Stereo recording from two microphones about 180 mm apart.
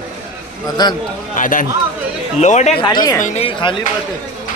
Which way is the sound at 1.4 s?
50° left (ahead or behind).